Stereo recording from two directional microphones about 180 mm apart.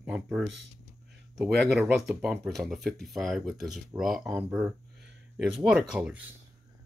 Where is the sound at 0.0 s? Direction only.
5° right (ahead or behind).